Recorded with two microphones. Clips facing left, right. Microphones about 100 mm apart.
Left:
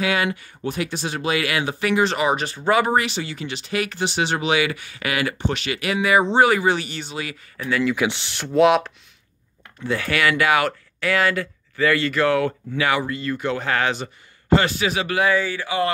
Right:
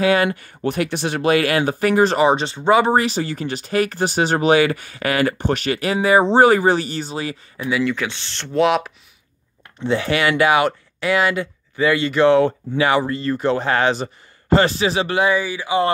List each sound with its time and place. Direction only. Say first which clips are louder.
0.0 s speech: right 5 dB; 40° right (ahead or behind)
0.6 s speech: right 6 dB; 60° right (ahead or behind); by 7.3 s 35° right (ahead or behind)
7.5 s speech: right 1 dB; 15° right (ahead or behind)
7.8 s speech: left 1 dB; 10° left (ahead or behind)
8.5 s speech: left 1 dB; centre (ahead or behind)
9.8 s speech: right 3 dB; 20° right (ahead or behind)